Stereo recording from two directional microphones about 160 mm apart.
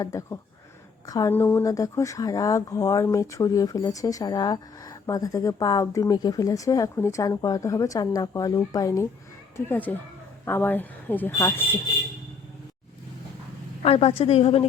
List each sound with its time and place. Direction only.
0.0 s speech: 20° left (ahead or behind)
13.8 s a woman's voice: 35° left (ahead or behind)